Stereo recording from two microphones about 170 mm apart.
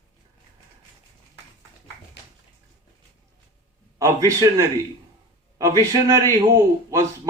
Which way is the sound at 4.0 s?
20° right (ahead or behind).